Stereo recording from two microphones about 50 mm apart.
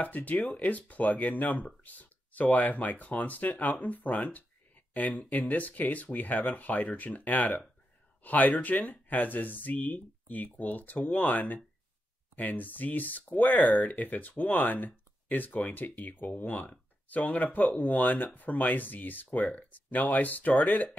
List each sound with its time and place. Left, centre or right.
0.0 s speech: left